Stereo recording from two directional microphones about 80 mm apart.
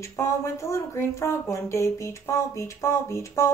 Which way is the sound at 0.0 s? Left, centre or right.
Left.